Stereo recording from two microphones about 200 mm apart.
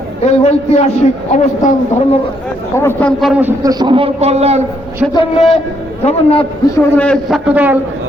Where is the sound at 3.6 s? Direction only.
20° right (ahead or behind).